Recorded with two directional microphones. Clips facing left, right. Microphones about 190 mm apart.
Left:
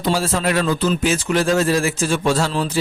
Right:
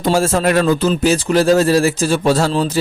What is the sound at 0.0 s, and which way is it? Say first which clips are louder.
A man's voice: right 5 dB; 45° right (ahead or behind).